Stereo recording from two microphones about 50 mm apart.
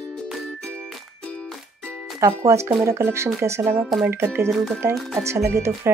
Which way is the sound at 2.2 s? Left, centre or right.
Right.